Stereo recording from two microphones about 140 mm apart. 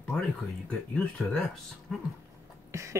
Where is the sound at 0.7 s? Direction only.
10° left (ahead or behind).